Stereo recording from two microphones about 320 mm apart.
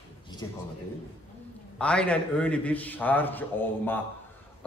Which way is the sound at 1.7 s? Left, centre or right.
Centre.